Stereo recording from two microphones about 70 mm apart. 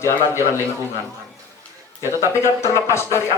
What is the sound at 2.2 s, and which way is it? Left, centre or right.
Speech, left.